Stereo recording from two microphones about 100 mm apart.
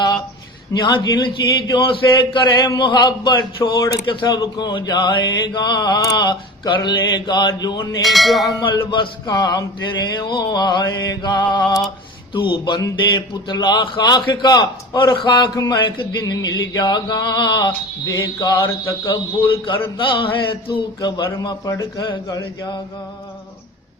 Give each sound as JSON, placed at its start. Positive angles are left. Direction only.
{"t": 0.7, "sound": "mantra", "side_deg": 55}
{"t": 4.0, "sound": "mantra", "side_deg": 50}
{"t": 4.3, "sound": "mantra", "side_deg": 40}
{"t": 8.0, "sound": "a sound", "side_deg": 0}
{"t": 8.9, "sound": "mantra", "side_deg": 50}
{"t": 9.3, "sound": "mantra", "side_deg": 40}
{"t": 12.8, "sound": "mantra", "side_deg": 45}
{"t": 15.7, "sound": "a man's voice", "side_deg": 55}
{"t": 16.2, "sound": "mantra", "side_deg": 40}
{"t": 18.1, "sound": "a sound", "side_deg": 40}
{"t": 19.1, "sound": "a man's voice", "side_deg": 55}
{"t": 21.4, "sound": "a sound", "side_deg": 35}